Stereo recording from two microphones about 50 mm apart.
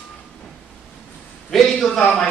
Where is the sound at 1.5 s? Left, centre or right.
Centre.